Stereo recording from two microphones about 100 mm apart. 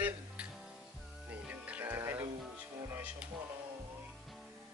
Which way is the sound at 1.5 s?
15° right (ahead or behind).